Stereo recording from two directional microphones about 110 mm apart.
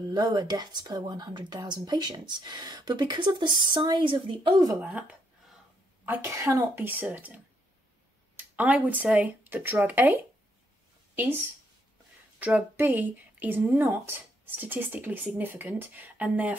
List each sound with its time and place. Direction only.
0.1 s speech: 40° right (ahead or behind)
6.0 s speech: 20° right (ahead or behind)